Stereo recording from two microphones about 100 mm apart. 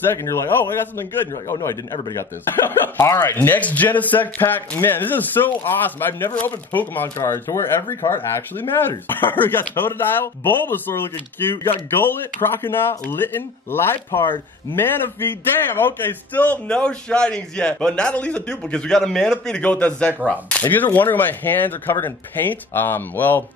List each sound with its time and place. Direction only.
0.1 s speech: 25° left (ahead or behind)
12.0 s speech: 20° left (ahead or behind)
14.2 s speech: 55° left (ahead or behind)
14.8 s a man's voice: 20° left (ahead or behind)